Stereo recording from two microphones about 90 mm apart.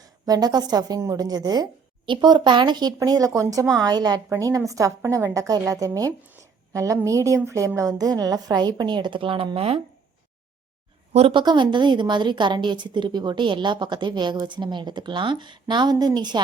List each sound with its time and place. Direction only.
0.0 s a woman's voice: 45° right (ahead or behind)
3.0 s a woman's voice: 40° right (ahead or behind)
5.0 s a woman's voice: 25° right (ahead or behind)
5.3 s a woman's voice: 40° right (ahead or behind); by 9.8 s 90° right
11.3 s a woman's voice: 60° right (ahead or behind)